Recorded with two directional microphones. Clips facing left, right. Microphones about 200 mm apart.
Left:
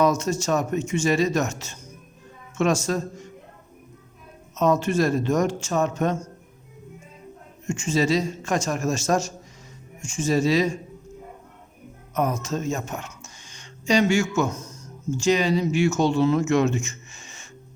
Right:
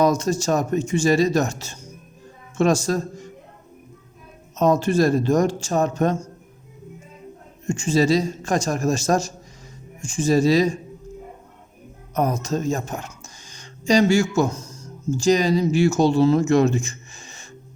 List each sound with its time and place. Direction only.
0.0 s speech: 35° right (ahead or behind)
4.5 s speech: 35° right (ahead or behind)
7.7 s speech: 35° right (ahead or behind)
12.1 s speech: 35° right (ahead or behind)